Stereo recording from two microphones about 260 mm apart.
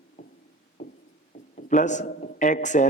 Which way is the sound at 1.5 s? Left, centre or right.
Left.